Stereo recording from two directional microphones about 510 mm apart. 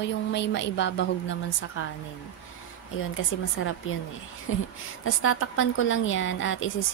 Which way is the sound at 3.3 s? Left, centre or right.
Left.